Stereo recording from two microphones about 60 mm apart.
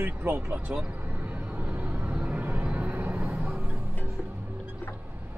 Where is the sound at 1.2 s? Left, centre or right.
Right.